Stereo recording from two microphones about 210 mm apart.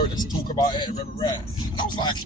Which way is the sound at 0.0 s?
20° left (ahead or behind).